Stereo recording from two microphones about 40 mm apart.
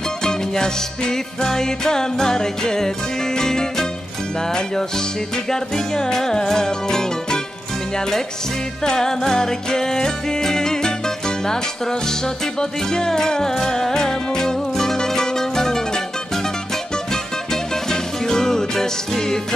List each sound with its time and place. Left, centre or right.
0.2 s music: centre
8.8 s music: centre